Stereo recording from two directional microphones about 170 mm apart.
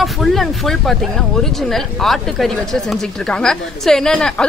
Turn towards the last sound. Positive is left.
turn(degrees=5)  # may be behind; listen again after turning